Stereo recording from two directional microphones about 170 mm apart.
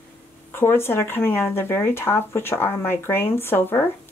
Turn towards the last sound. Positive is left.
turn(degrees=15)  # may be behind; listen again after turning